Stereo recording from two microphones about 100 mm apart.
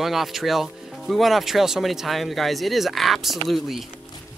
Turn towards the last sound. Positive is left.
turn(degrees=0)  # may be behind; listen again after turning